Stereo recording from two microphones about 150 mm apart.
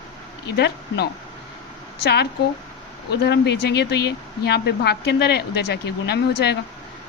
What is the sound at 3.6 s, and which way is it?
Speech, 90° left.